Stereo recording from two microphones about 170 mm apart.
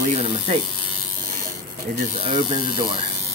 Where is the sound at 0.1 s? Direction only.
35° right (ahead or behind).